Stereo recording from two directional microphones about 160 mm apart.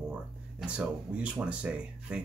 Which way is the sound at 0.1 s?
5° right (ahead or behind).